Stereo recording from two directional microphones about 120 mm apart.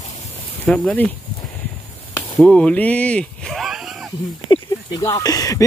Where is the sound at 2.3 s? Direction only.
5° left (ahead or behind).